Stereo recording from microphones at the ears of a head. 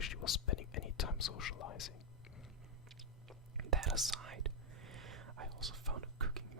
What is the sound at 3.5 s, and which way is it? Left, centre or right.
Whispering, right.